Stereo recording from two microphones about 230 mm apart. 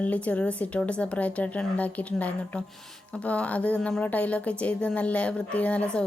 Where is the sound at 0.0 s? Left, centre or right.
Centre.